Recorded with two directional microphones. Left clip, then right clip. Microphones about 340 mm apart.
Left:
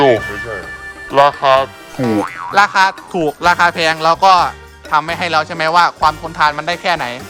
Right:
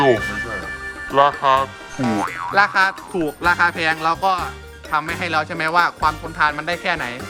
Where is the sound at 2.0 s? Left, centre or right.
Centre.